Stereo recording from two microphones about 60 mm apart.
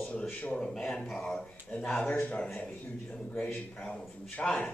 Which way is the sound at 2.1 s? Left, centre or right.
Left.